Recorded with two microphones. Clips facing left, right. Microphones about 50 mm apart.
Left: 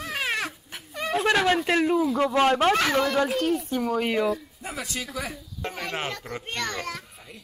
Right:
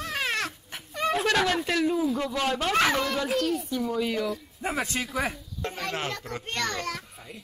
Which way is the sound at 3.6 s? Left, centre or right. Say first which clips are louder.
Left 2 dB; left.